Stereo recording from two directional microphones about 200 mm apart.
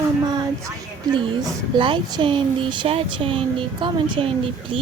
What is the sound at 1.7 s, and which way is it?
Speech, 25° right (ahead or behind).